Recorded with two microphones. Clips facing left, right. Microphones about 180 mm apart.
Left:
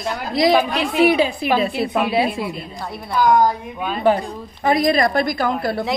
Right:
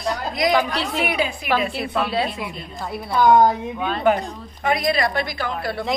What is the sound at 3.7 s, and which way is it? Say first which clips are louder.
Speech: even; 10° left (ahead or behind).